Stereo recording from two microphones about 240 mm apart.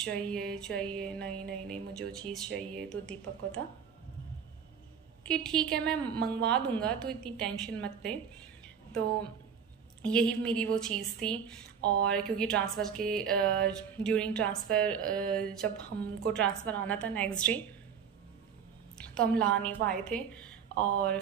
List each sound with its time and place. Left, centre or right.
0.0 s a woman's voice: centre
5.2 s a woman's voice: centre
10.0 s a woman's voice: centre
18.9 s a woman's voice: centre